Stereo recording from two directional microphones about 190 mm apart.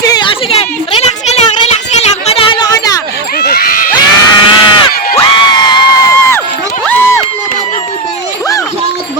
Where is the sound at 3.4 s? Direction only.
55° left (ahead or behind).